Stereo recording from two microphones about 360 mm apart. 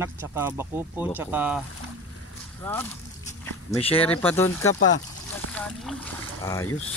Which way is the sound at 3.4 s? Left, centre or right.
Centre.